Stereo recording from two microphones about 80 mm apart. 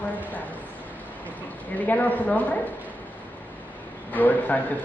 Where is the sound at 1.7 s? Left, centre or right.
Left.